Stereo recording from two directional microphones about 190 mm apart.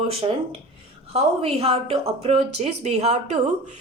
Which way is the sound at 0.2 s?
25° right (ahead or behind).